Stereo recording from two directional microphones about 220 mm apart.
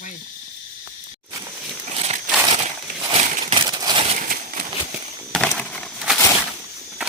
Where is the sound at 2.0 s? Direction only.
30° right (ahead or behind).